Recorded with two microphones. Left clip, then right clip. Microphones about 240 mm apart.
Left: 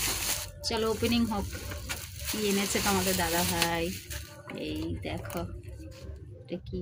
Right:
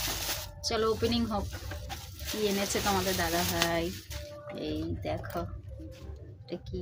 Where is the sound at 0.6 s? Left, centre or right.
Centre.